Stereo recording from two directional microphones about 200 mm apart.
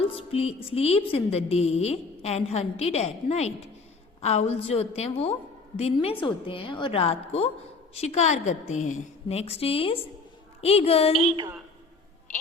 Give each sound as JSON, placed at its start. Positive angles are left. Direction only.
{"t": 0.0, "sound": "a woman's voice", "side_deg": 30}
{"t": 11.2, "sound": "a woman's voice", "side_deg": -30}